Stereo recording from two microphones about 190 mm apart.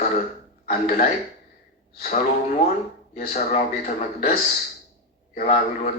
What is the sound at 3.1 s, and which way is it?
Speech, 35° left (ahead or behind).